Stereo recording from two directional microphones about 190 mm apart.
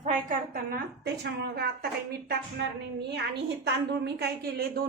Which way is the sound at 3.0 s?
60° right (ahead or behind).